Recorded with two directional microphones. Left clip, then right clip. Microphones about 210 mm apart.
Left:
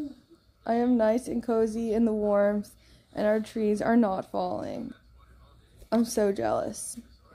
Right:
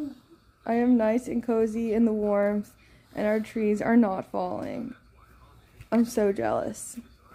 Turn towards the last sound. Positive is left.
turn(degrees=-5)  # may be behind; listen again after turning